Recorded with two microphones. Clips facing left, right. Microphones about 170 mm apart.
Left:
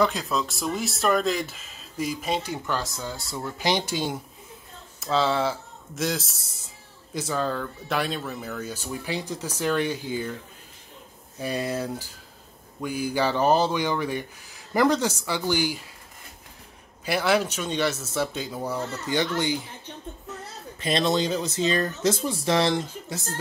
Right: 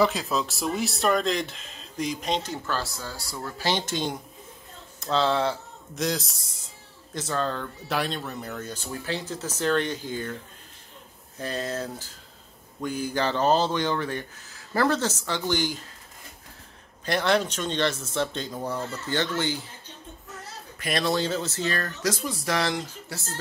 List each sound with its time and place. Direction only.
0.0 s speech: centre (ahead or behind)
11.3 s speech: 10° left (ahead or behind)
17.0 s speech: 5° left (ahead or behind)
20.8 s speech: 20° left (ahead or behind)